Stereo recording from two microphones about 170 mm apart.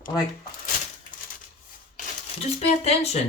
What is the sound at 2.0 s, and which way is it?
Speech, 40° left (ahead or behind).